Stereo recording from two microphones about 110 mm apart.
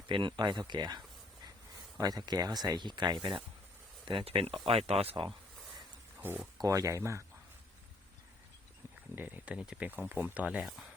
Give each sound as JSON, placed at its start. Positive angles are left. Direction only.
{"t": 0.1, "sound": "speech", "side_deg": -45}
{"t": 6.1, "sound": "speech", "side_deg": -15}
{"t": 6.6, "sound": "speech", "side_deg": -30}
{"t": 9.1, "sound": "speech", "side_deg": -15}
{"t": 10.6, "sound": "speech", "side_deg": 0}